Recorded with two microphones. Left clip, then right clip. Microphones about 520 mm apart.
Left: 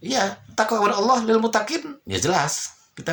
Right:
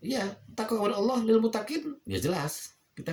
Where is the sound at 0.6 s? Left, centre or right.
Right.